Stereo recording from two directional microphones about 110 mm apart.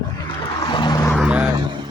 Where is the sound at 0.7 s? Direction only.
45° left (ahead or behind).